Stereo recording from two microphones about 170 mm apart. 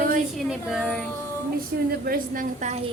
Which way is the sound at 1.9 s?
55° right (ahead or behind).